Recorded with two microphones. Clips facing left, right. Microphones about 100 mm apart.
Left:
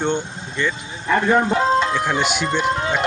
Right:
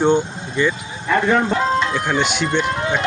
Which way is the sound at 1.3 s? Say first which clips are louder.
Left 2 dB; 25° left (ahead or behind).